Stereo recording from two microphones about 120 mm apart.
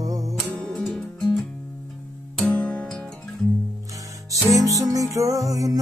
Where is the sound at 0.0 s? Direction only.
30° right (ahead or behind).